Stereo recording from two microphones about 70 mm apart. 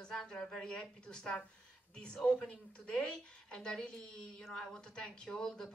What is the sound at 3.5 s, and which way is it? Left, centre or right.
A woman's voice, centre.